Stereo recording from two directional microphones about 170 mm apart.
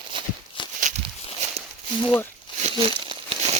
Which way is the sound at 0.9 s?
45° right (ahead or behind).